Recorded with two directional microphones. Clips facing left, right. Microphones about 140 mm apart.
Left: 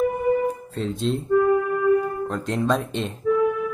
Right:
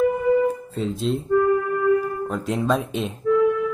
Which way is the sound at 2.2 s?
5° right (ahead or behind).